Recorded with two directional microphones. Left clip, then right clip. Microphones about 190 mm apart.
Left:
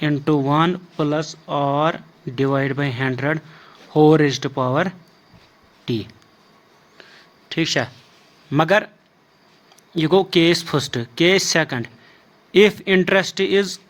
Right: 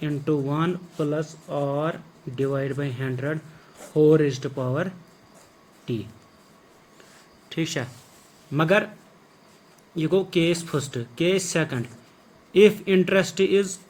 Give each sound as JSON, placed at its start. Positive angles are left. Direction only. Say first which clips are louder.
{"t": 0.0, "sound": "speech", "louder": "left 6 dB", "side_deg": 55}
{"t": 7.5, "sound": "speech", "louder": "left 8 dB", "side_deg": 35}
{"t": 8.5, "sound": "speech", "louder": "left 4 dB", "side_deg": 50}
{"t": 9.9, "sound": "speech", "louder": "left 6 dB", "side_deg": 50}